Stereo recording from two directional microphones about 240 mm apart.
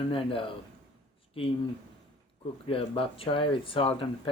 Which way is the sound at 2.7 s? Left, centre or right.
Left.